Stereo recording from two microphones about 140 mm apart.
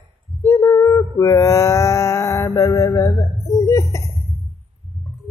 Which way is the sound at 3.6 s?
20° left (ahead or behind).